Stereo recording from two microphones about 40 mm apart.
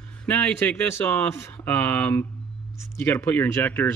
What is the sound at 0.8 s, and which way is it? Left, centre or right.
Speech, left.